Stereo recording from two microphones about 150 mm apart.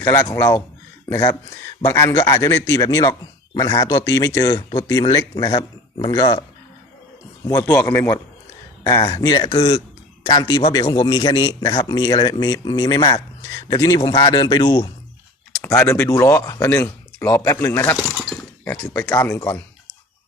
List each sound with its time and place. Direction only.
0.0 s speech: 20° left (ahead or behind)
1.8 s speech: 20° left (ahead or behind)
7.6 s speech: 10° left (ahead or behind)
9.0 s speech: 35° left (ahead or behind)
9.2 s speech: 25° left (ahead or behind)
9.5 s speech: 40° left (ahead or behind)
10.2 s speech: 25° left (ahead or behind)
11.3 s speech: 20° left (ahead or behind)
15.6 s speech: 20° left (ahead or behind)
17.9 s shatter: centre (ahead or behind)
18.6 s speech: 10° left (ahead or behind)